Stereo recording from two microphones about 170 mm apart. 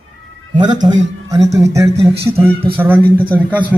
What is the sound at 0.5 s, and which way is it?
Speech, 25° right (ahead or behind).